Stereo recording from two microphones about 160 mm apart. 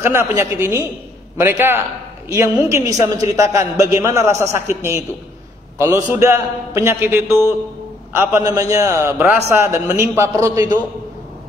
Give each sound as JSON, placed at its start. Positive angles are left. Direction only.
{"t": 0.0, "sound": "a man's voice", "side_deg": -15}
{"t": 6.2, "sound": "a man's voice", "side_deg": -15}